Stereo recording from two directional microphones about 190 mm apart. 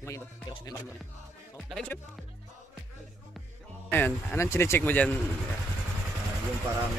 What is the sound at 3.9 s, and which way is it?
Speech, 10° left (ahead or behind).